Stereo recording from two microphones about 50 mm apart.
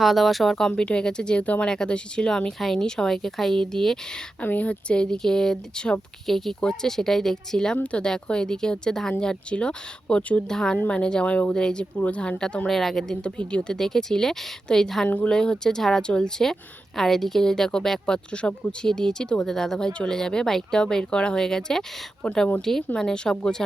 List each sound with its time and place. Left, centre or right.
0.0 s speech: centre
0.8 s speech: centre
1.7 s speech: centre
4.4 s speech: left
6.2 s speech: centre; by 10.4 s left
10.5 s speech: centre; by 11.5 s left
11.5 s speech: centre
12.6 s speech: centre
13.2 s speech: left
13.7 s speech: centre
15.0 s speech: left
15.3 s speech: centre
19.9 s speech: left
23.0 s speech: centre